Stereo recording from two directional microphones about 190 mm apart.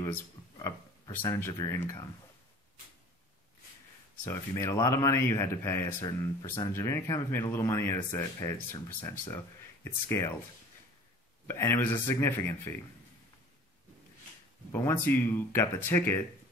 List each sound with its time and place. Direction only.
0.6 s speech: 15° left (ahead or behind)
4.3 s a man's voice: 15° left (ahead or behind)
11.4 s a man's voice: 10° left (ahead or behind)
14.7 s a man's voice: 10° left (ahead or behind)